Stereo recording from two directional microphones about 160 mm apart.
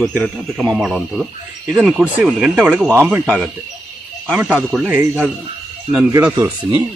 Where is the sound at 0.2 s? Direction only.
Centre (ahead or behind).